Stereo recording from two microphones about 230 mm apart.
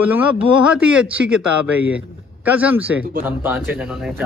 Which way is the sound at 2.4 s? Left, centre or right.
Centre.